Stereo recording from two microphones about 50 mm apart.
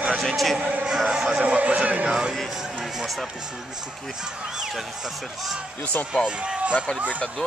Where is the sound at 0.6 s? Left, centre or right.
Right.